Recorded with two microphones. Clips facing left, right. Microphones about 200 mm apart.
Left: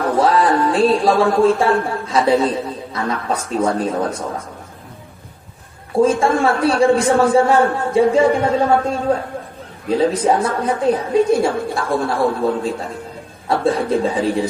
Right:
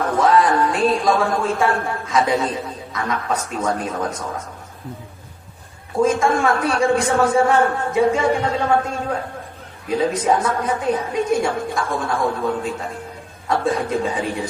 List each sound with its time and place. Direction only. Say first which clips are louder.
0.0 s speech: left 1 dB; 30° left (ahead or behind)
5.9 s a woman's voice: left 3 dB; 30° left (ahead or behind)